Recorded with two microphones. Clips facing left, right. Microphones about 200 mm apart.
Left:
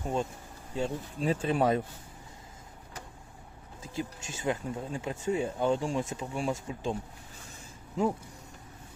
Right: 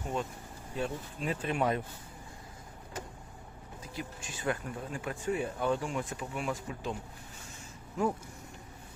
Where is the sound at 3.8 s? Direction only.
25° left (ahead or behind).